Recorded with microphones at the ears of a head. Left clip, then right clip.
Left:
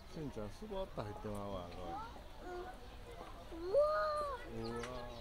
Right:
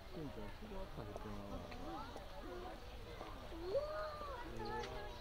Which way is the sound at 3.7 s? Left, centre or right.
Left.